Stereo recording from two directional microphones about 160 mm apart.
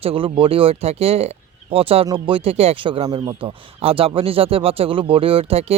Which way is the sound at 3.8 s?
35° right (ahead or behind).